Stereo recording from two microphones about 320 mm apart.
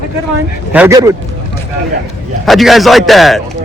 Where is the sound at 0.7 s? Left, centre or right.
Centre.